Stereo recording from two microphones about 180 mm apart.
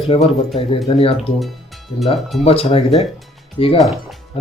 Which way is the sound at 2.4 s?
35° left (ahead or behind).